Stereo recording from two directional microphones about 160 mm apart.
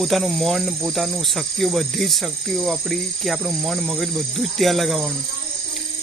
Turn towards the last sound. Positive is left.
turn(degrees=0)  # may be behind; listen again after turning